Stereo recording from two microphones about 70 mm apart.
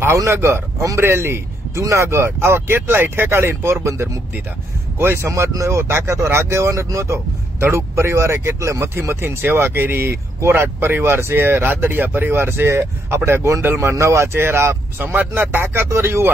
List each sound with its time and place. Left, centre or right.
0.0 s a man's voice: right